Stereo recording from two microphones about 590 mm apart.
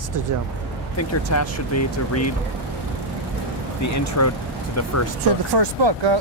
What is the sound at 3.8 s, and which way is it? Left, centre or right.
Speech, left.